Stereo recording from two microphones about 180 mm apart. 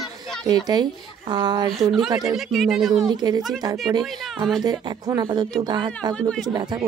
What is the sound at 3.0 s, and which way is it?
Speech, 20° right (ahead or behind).